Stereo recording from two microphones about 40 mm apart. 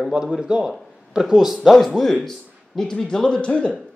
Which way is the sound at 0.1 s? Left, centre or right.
Centre.